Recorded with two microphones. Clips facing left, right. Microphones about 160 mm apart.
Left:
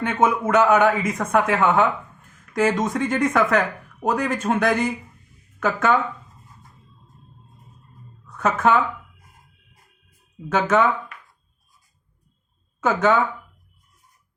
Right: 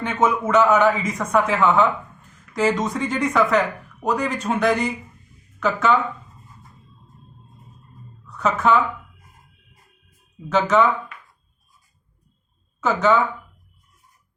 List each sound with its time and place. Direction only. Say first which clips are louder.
0.0 s a man's voice: left 1 dB; 55° left (ahead or behind)
8.3 s speech: even; 50° left (ahead or behind)
10.5 s a man's voice: right 1 dB; 50° left (ahead or behind)
12.8 s a man's voice: even; 50° left (ahead or behind)